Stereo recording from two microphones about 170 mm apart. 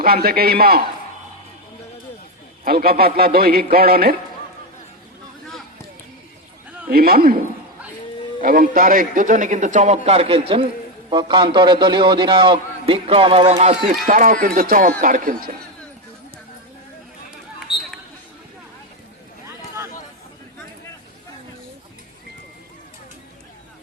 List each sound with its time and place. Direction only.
0.0 s speech: 60° right (ahead or behind)
2.6 s speech: 60° right (ahead or behind)
6.9 s a man's voice: 65° right (ahead or behind); by 13.9 s 40° right (ahead or behind)
14.1 s speech: 55° right (ahead or behind)
17.7 s a sound: 30° left (ahead or behind)
19.5 s a sound: 15° right (ahead or behind)